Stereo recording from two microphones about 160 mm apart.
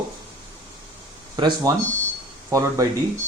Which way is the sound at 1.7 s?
20° right (ahead or behind).